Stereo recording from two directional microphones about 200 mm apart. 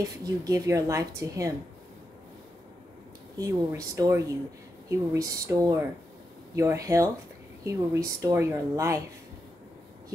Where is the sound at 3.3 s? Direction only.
15° right (ahead or behind).